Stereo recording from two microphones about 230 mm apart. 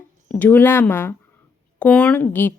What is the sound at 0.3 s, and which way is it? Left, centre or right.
Speech, centre.